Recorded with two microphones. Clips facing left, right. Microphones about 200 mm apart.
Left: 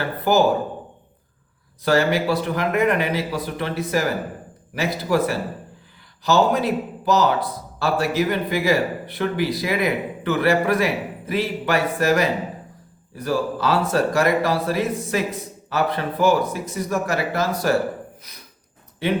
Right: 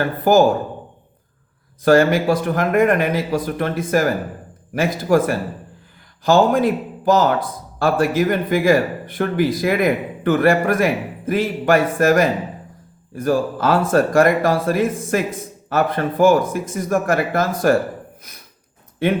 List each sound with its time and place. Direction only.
0.0 s a man's voice: 45° right (ahead or behind)
1.8 s a man's voice: 50° right (ahead or behind)